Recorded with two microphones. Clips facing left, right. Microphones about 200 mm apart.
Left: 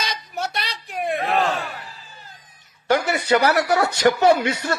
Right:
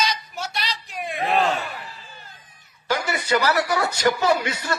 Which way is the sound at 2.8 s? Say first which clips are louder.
Left 5 dB; 65° left (ahead or behind).